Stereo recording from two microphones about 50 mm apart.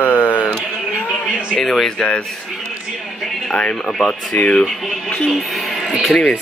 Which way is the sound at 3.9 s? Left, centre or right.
Centre.